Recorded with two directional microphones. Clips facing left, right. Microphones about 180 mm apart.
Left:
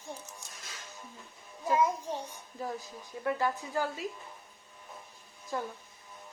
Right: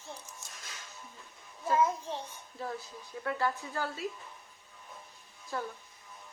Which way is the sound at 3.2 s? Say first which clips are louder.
Left 2 dB; 15° left (ahead or behind).